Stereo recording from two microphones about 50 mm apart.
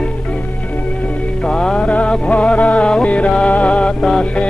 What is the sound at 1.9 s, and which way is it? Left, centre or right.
Music, left.